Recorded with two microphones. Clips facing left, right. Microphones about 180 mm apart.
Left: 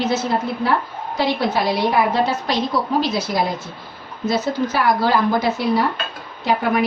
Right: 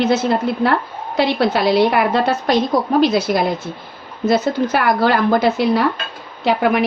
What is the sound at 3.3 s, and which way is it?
A woman's voice, 70° right (ahead or behind).